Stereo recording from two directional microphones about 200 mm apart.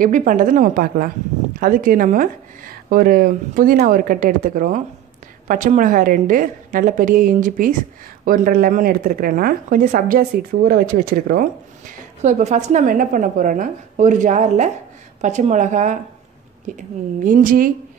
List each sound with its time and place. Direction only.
0.0 s a woman's voice: 40° right (ahead or behind)